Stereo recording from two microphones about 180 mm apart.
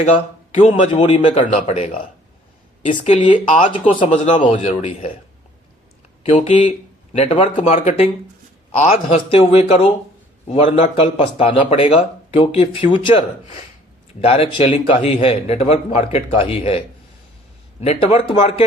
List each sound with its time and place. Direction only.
0.0 s speech: 30° left (ahead or behind)
3.2 s speech: 30° left (ahead or behind)
6.2 s speech: 35° left (ahead or behind)
6.7 s a sound: 40° left (ahead or behind)
7.5 s speech: 40° left (ahead or behind)
14.2 s speech: 30° left (ahead or behind)